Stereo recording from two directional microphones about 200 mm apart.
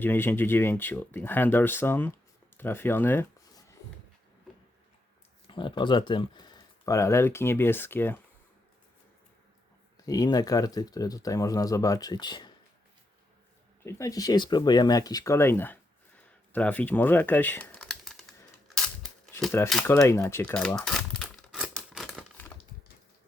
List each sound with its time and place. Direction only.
0.0 s speech: 10° left (ahead or behind)
2.6 s a sound: 10° left (ahead or behind)
5.5 s speech: 25° left (ahead or behind)
10.1 s speech: 20° left (ahead or behind)
13.8 s speech: 15° left (ahead or behind); by 18.3 s centre (ahead or behind)
19.3 s speech: 10° left (ahead or behind)
19.9 s crumpling: 15° left (ahead or behind)